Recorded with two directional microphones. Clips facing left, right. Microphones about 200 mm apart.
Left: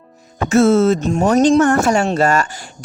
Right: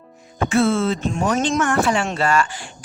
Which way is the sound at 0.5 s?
40° left (ahead or behind).